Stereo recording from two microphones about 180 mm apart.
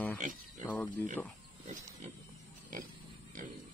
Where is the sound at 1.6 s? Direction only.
40° right (ahead or behind).